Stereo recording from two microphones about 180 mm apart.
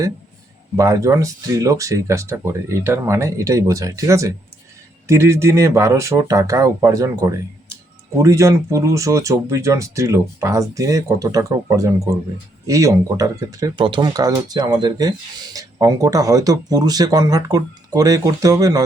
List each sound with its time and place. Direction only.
0.8 s speech: 20° right (ahead or behind)